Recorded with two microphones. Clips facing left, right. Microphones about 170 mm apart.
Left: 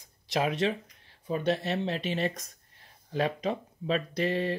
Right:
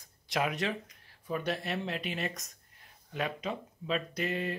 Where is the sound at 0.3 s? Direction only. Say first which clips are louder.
Left 4 dB; 25° left (ahead or behind).